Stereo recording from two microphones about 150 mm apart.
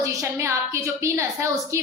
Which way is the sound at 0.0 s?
20° right (ahead or behind).